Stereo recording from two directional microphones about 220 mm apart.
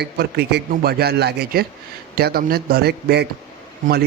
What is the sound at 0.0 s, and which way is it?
A man's voice, 45° right (ahead or behind).